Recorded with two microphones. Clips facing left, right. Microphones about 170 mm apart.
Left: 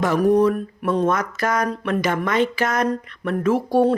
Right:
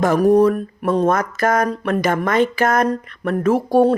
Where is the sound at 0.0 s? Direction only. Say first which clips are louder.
Right 3 dB; 45° right (ahead or behind).